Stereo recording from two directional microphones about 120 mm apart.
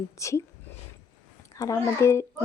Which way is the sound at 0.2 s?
25° left (ahead or behind).